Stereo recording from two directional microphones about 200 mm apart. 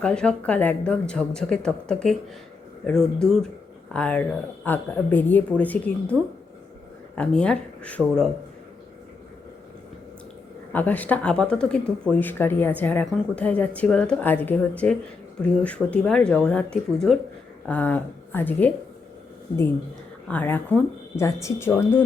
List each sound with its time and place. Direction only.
0.0 s a woman's voice: 5° left (ahead or behind)
7.2 s a woman's voice: 5° left (ahead or behind)
10.7 s a woman's voice: 10° left (ahead or behind)
20.2 s speech: 10° left (ahead or behind)